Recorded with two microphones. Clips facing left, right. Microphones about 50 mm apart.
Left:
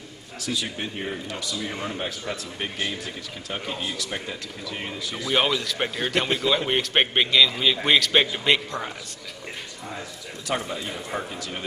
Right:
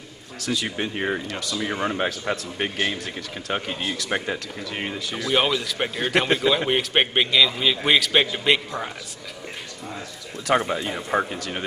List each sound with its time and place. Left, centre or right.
0.4 s speech: right
5.3 s a man's voice: centre
10.4 s speech: right